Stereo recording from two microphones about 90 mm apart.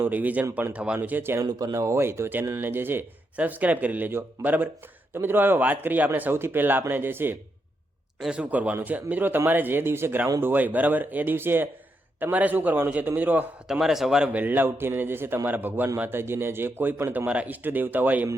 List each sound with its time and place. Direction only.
0.0 s a man's voice: 20° right (ahead or behind)
1.5 s speech: 45° right (ahead or behind); by 7.3 s 25° right (ahead or behind)
8.2 s a man's voice: 10° right (ahead or behind)
13.7 s a man's voice: 5° right (ahead or behind)
14.3 s speech: 20° right (ahead or behind)